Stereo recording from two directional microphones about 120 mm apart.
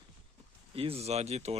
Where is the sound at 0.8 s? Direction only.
55° right (ahead or behind).